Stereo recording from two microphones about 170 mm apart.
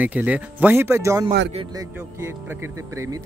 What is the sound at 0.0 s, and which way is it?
Speech, 10° right (ahead or behind).